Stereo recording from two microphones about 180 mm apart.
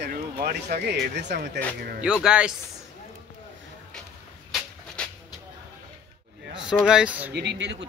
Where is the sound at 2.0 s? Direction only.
5° right (ahead or behind).